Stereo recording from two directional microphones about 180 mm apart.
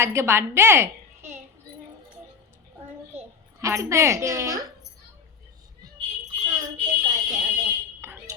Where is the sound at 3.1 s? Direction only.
15° right (ahead or behind).